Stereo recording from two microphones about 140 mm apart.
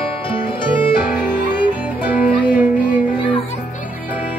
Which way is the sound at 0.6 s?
35° left (ahead or behind).